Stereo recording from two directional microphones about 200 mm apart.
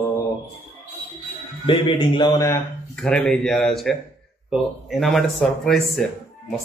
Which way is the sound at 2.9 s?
5° left (ahead or behind).